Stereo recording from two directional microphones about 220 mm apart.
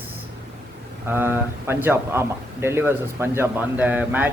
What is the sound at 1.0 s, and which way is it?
Speech, 10° right (ahead or behind).